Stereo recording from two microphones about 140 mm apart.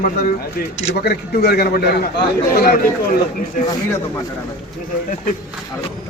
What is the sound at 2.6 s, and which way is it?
Speech, 90° left.